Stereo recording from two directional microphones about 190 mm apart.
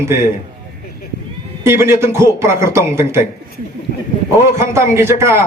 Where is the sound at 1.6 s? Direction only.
15° right (ahead or behind).